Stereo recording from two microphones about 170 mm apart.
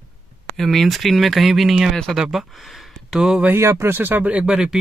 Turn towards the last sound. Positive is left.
turn(degrees=-5)  # may be behind; listen again after turning